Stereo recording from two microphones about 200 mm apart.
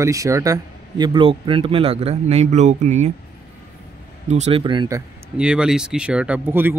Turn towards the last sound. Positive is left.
turn(degrees=-10)  # may be behind; listen again after turning